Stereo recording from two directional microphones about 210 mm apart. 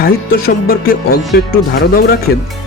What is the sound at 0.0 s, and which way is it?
Speech, 45° left (ahead or behind).